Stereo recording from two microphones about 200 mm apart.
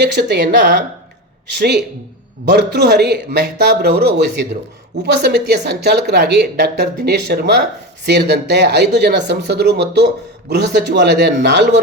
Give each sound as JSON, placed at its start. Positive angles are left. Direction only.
{"t": 0.0, "sound": "a woman's voice", "side_deg": -60}